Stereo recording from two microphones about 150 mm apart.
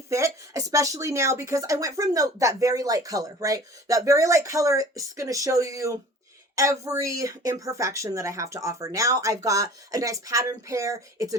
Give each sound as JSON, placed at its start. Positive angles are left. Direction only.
{"t": 0.1, "sound": "speech", "side_deg": -20}